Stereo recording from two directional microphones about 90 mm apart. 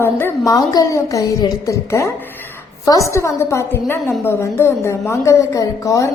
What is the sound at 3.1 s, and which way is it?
A woman's voice, 35° left (ahead or behind).